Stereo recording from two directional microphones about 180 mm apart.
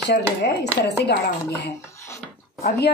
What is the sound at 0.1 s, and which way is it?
Speech, 70° left (ahead or behind).